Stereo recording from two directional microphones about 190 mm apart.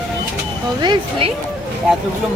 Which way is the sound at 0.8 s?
25° right (ahead or behind).